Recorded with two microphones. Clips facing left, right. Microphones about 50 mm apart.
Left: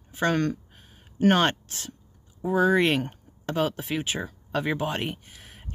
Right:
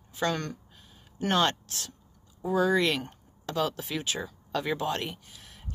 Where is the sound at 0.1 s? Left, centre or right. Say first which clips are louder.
Left 5 dB; left.